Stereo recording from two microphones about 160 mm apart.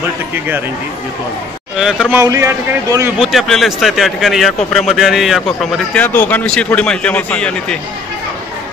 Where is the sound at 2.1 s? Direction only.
20° right (ahead or behind).